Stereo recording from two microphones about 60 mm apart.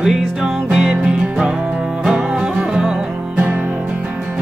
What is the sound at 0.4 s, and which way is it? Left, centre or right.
Music, centre.